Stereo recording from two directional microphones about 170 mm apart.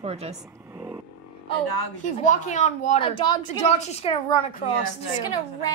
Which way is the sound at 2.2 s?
45° left (ahead or behind).